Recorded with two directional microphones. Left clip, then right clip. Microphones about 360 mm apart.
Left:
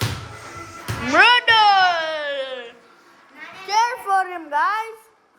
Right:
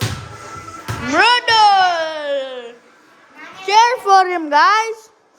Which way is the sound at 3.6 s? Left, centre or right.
Right.